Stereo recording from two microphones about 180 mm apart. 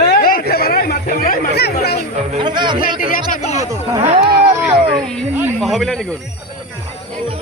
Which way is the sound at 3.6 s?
20° right (ahead or behind).